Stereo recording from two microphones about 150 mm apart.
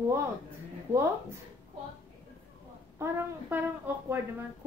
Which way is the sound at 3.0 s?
15° right (ahead or behind).